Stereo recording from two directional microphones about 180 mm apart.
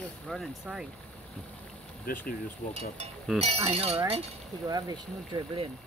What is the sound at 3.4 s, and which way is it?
Speech, 35° right (ahead or behind).